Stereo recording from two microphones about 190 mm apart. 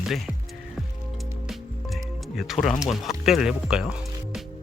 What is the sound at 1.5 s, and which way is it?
Music, centre (ahead or behind).